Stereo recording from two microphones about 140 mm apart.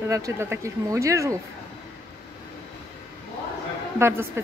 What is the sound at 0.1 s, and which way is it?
A woman's voice, 20° right (ahead or behind).